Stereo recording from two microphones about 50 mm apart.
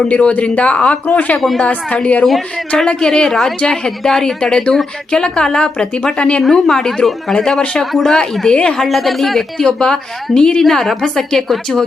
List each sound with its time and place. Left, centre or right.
0.1 s speech: left
1.4 s speech: centre
1.6 s speech: left
2.2 s speech: centre
2.8 s a woman's voice: centre
6.4 s a woman's voice: centre
8.4 s speech: centre
8.8 s a woman's voice: centre